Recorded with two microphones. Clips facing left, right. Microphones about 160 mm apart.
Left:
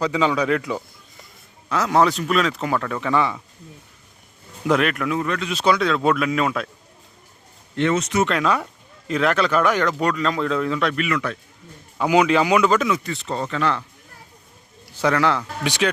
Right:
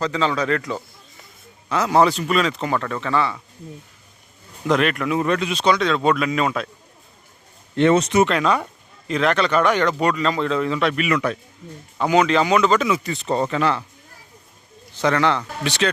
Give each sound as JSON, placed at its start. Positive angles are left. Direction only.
{"t": 0.0, "sound": "a man's voice", "side_deg": 10}
{"t": 4.6, "sound": "speech", "side_deg": 5}
{"t": 5.2, "sound": "speech", "side_deg": -25}
{"t": 5.5, "sound": "speech", "side_deg": 5}
{"t": 7.8, "sound": "speech", "side_deg": -30}
{"t": 8.3, "sound": "speech", "side_deg": 0}
{"t": 11.0, "sound": "speech", "side_deg": -20}
{"t": 11.9, "sound": "a man's voice", "side_deg": 10}
{"t": 13.1, "sound": "speech", "side_deg": -20}
{"t": 14.9, "sound": "speech", "side_deg": 5}